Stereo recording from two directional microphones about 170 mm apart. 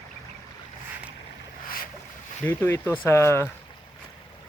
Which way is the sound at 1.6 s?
60° left (ahead or behind).